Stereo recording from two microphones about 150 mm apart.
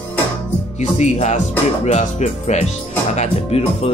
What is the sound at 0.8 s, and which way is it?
Speech, 50° left (ahead or behind).